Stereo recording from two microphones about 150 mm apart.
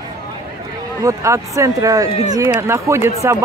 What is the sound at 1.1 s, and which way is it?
A man's voice, 20° right (ahead or behind).